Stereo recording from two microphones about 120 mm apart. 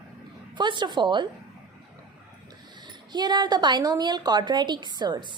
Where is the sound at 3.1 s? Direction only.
35° right (ahead or behind).